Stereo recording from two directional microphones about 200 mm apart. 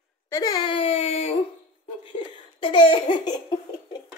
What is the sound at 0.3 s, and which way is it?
Baby cry, 20° left (ahead or behind).